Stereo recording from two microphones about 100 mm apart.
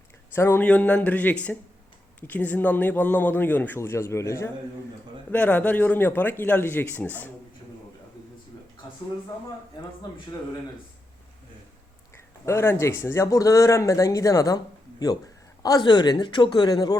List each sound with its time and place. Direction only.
0.3 s a man's voice: 25° left (ahead or behind)
0.6 s a man's voice: 15° left (ahead or behind); by 4.5 s 30° left (ahead or behind)
5.3 s a man's voice: 15° left (ahead or behind)
12.1 s speech: 25° left (ahead or behind); by 17.0 s 40° left (ahead or behind)